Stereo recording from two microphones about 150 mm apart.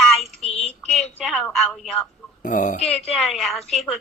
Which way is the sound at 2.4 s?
60° left (ahead or behind).